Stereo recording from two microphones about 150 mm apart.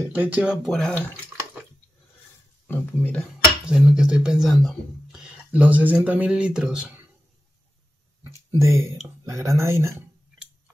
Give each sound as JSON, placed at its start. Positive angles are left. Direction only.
{"t": 0.1, "sound": "speech", "side_deg": -10}
{"t": 2.6, "sound": "speech", "side_deg": 10}
{"t": 3.6, "sound": "speech", "side_deg": -5}
{"t": 8.5, "sound": "speech", "side_deg": -20}